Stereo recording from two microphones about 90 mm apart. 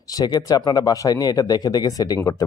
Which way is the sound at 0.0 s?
45° left (ahead or behind).